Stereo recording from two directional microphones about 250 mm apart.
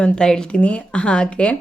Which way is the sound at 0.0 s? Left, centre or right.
Centre.